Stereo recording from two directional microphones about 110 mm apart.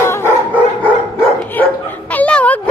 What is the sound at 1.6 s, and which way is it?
Dog, 15° left (ahead or behind).